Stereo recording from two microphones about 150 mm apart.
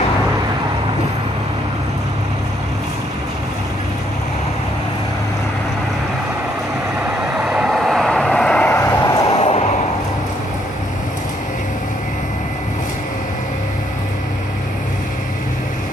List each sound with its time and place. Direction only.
7.3 s vehicle: centre (ahead or behind)
8.7 s vehicle: 20° left (ahead or behind)
9.3 s vehicle: 45° left (ahead or behind)